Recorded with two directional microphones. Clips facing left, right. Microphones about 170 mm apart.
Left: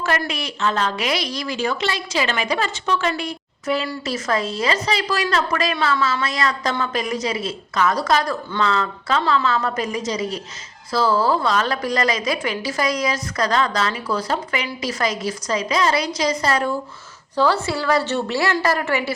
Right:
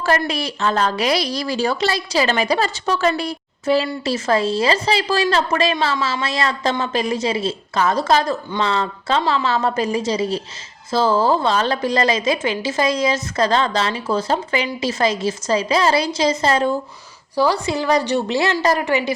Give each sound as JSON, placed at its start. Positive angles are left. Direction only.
{"t": 0.0, "sound": "a woman's voice", "side_deg": -35}
{"t": 17.3, "sound": "a woman's voice", "side_deg": -15}